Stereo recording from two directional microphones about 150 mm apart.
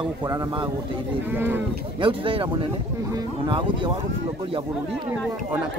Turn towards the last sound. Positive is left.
turn(degrees=-35)  # may be behind; listen again after turning